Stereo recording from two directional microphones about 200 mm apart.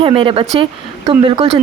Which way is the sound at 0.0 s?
25° right (ahead or behind).